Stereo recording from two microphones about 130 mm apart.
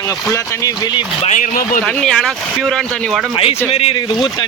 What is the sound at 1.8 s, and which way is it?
Speech, 5° left (ahead or behind).